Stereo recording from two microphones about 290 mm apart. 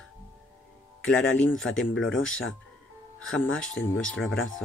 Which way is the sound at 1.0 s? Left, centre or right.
Centre.